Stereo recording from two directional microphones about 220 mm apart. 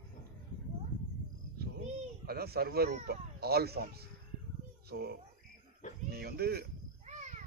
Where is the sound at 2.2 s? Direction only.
45° right (ahead or behind).